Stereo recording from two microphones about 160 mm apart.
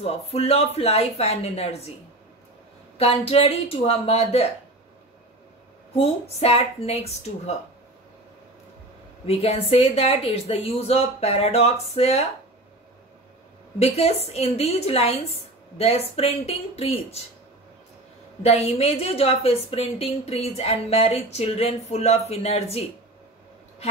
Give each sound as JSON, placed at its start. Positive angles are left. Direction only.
{"t": 0.0, "sound": "a woman's voice", "side_deg": 40}
{"t": 3.0, "sound": "a woman's voice", "side_deg": 40}
{"t": 5.9, "sound": "a woman's voice", "side_deg": 40}
{"t": 9.2, "sound": "a woman's voice", "side_deg": 40}
{"t": 13.7, "sound": "a woman's voice", "side_deg": 40}
{"t": 18.4, "sound": "a woman's voice", "side_deg": 40}